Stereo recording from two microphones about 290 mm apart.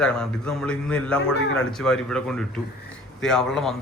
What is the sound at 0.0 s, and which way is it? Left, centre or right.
A man's voice, centre.